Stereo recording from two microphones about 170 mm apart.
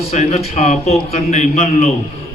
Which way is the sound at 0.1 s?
40° left (ahead or behind).